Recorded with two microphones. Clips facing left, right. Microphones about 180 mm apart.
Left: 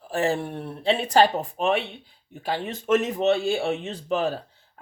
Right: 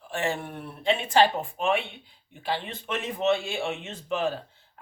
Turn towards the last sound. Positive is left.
turn(degrees=35)  # may be behind; listen again after turning